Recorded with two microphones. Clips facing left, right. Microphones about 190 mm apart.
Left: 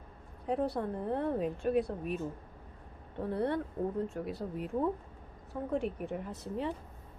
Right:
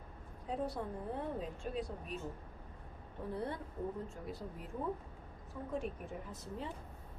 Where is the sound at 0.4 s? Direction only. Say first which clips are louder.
Left 7 dB; 65° left (ahead or behind).